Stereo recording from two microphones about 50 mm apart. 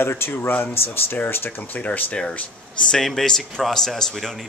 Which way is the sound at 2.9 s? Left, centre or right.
Centre.